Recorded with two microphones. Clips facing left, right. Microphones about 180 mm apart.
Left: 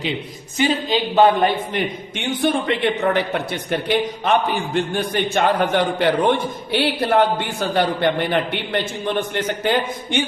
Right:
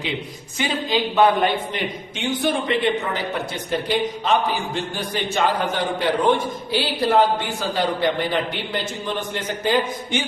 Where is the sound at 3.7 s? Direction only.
60° left (ahead or behind).